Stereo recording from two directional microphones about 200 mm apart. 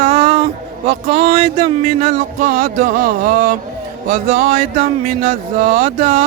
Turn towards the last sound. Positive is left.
turn(degrees=-45)  # may be behind; listen again after turning